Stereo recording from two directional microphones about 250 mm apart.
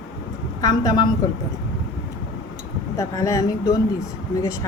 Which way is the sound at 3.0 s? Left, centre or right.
Centre.